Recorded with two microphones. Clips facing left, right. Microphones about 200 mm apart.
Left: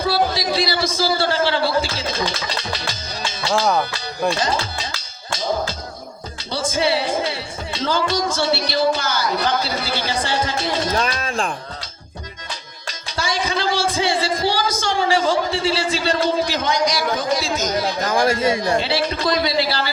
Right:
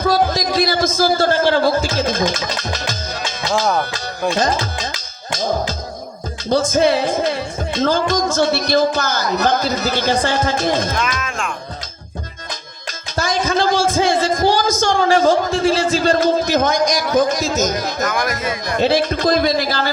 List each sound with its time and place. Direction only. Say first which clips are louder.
0.0 s a man's voice: right 3 dB; 45° right (ahead or behind)
6.5 s speech: right 6 dB; 45° right (ahead or behind)
10.9 s speech: left 1 dB; 35° left (ahead or behind)
13.1 s a man's voice: right 5 dB; 45° right (ahead or behind)
18.0 s speech: left 4 dB; 30° left (ahead or behind)
18.8 s speech: right 6 dB; 45° right (ahead or behind)